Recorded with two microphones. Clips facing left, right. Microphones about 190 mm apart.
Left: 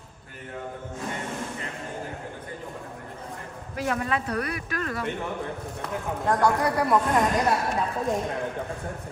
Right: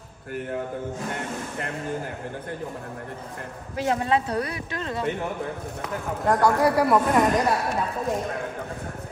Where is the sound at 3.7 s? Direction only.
25° right (ahead or behind).